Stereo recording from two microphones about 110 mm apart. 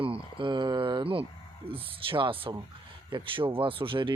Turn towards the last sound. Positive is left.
turn(degrees=-50)  # may be behind; listen again after turning